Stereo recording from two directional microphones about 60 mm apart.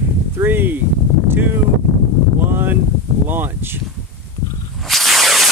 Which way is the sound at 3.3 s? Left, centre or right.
Right.